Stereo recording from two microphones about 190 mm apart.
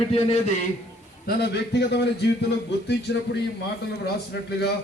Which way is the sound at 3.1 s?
60° left (ahead or behind).